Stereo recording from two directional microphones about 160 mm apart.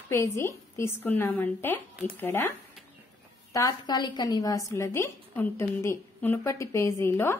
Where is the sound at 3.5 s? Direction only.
25° left (ahead or behind).